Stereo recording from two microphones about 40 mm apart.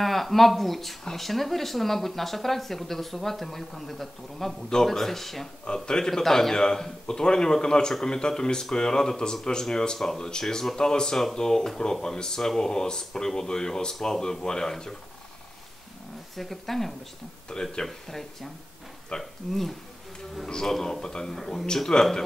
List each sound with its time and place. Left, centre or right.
0.0 s speech: centre
5.9 s speech: centre
16.3 s speech: centre
17.5 s speech: centre
17.8 s speech: centre
19.1 s speech: left
20.4 s speech: centre
21.4 s speech: centre
21.9 s speech: centre